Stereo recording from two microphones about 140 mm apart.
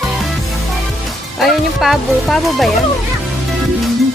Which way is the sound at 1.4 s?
Centre (ahead or behind).